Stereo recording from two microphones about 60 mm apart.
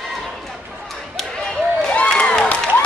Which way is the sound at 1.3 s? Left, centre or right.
Centre.